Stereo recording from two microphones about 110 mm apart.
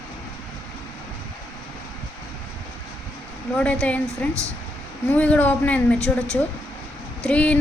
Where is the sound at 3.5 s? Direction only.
10° left (ahead or behind).